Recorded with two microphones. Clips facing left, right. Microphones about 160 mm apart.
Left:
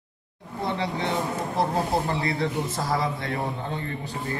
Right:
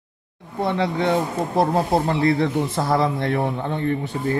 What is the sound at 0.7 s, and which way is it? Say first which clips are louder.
A man's voice: right 6 dB; 60° right (ahead or behind).